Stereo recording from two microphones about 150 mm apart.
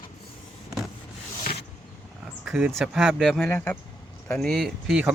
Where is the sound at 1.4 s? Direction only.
90° left.